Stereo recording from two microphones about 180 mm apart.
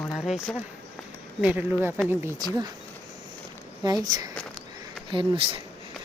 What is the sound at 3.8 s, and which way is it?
Speech, 20° right (ahead or behind).